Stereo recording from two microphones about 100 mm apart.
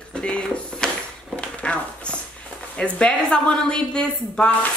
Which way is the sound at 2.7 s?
10° left (ahead or behind).